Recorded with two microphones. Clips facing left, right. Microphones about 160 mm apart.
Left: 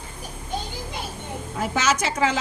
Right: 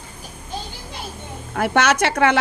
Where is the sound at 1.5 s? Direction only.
70° right (ahead or behind).